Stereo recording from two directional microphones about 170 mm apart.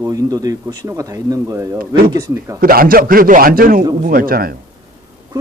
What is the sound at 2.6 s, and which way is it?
A man's voice, 60° right (ahead or behind).